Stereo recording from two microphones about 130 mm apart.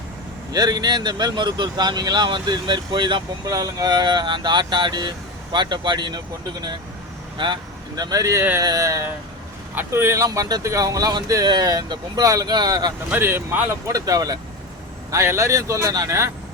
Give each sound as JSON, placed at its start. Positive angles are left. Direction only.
{"t": 0.5, "sound": "speech", "side_deg": -30}
{"t": 3.4, "sound": "speech", "side_deg": -25}
{"t": 13.1, "sound": "speech", "side_deg": -20}
{"t": 13.8, "sound": "speech", "side_deg": -25}